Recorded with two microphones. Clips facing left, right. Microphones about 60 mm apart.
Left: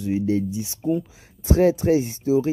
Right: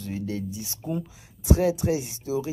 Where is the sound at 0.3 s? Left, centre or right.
Left.